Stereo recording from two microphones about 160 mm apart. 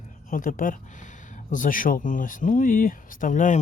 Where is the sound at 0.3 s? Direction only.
55° left (ahead or behind).